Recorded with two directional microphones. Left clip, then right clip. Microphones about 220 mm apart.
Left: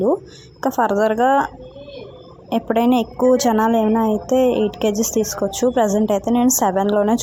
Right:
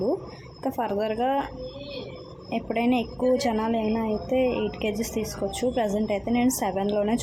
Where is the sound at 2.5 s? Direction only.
30° left (ahead or behind).